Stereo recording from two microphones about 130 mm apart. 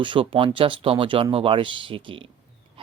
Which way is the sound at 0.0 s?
40° right (ahead or behind).